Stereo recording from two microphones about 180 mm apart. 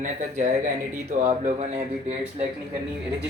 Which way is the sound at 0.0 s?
40° right (ahead or behind).